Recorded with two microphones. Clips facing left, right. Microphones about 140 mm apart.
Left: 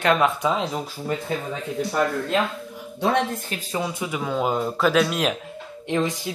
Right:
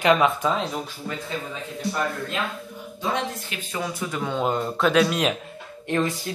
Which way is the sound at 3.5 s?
35° left (ahead or behind).